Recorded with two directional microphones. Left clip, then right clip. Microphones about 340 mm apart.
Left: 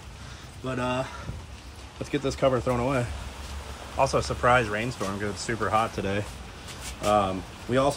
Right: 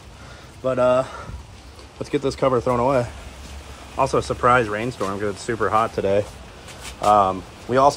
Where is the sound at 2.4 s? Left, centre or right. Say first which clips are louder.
Right 6 dB; right.